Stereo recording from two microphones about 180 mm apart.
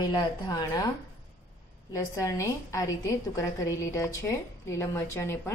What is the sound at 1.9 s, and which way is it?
A woman's voice, 20° left (ahead or behind).